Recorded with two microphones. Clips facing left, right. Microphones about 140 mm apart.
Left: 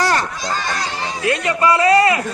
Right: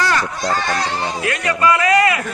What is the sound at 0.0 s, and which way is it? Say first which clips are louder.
Children playing: left 1 dB; 35° left (ahead or behind).